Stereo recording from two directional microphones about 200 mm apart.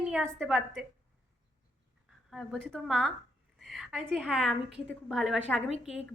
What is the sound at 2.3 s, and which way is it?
A woman's voice, centre (ahead or behind).